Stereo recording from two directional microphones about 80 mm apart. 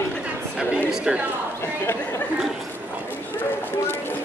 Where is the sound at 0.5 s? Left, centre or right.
Centre.